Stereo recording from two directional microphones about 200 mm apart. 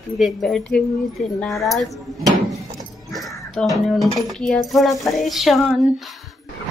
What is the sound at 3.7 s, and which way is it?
A woman's voice, centre (ahead or behind).